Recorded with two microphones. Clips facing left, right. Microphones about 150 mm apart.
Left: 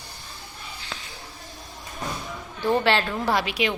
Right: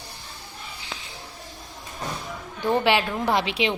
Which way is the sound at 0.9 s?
15° right (ahead or behind).